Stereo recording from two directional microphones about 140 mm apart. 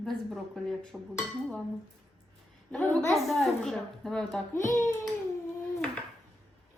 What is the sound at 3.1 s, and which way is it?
A woman's voice, 5° left (ahead or behind).